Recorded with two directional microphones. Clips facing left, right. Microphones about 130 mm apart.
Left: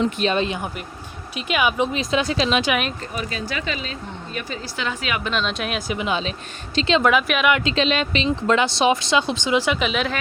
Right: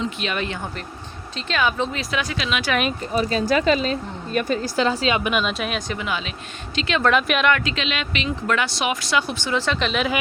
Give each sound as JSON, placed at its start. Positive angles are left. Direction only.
{"t": 0.2, "sound": "speech", "side_deg": 30}
{"t": 0.4, "sound": "speech", "side_deg": 20}
{"t": 3.2, "sound": "speech", "side_deg": -35}
{"t": 5.2, "sound": "speech", "side_deg": -10}
{"t": 5.9, "sound": "speech", "side_deg": 20}
{"t": 7.0, "sound": "speech", "side_deg": 5}
{"t": 7.5, "sound": "speech", "side_deg": 30}